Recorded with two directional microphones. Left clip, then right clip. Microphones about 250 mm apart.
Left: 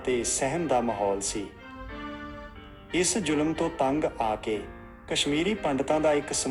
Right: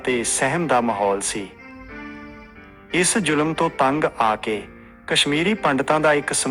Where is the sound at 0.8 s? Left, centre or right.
Right.